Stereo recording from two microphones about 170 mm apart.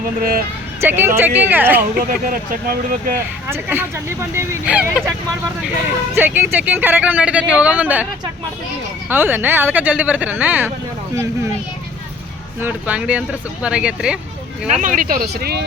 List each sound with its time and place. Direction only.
0.8 s speech: 15° right (ahead or behind)
2.0 s speech: 55° right (ahead or behind)
3.5 s speech: 15° right (ahead or behind)
6.1 s speech: 10° right (ahead or behind)
9.0 s speech: 10° right (ahead or behind)
12.5 s speech: 10° right (ahead or behind)
14.7 s speech: 50° right (ahead or behind); by 15.6 s 70° right (ahead or behind)